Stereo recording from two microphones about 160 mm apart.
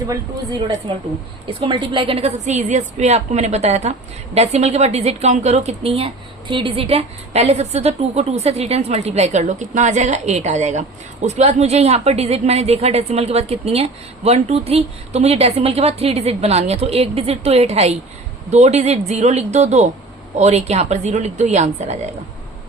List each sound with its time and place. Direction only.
0.1 s speech: 20° right (ahead or behind)
1.5 s a woman's voice: 30° right (ahead or behind)